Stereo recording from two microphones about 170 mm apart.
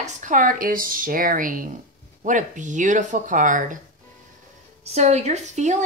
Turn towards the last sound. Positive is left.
turn(degrees=-45)  # may be behind; listen again after turning